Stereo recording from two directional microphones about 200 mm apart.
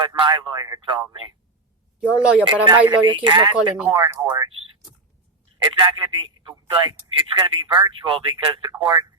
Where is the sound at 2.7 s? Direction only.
25° right (ahead or behind).